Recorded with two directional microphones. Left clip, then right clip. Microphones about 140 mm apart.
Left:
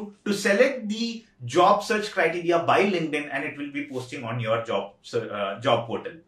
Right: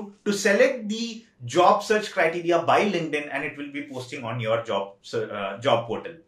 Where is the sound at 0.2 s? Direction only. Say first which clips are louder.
Right 1 dB; 15° right (ahead or behind).